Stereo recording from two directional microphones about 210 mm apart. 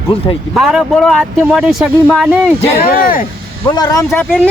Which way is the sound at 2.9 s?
45° left (ahead or behind).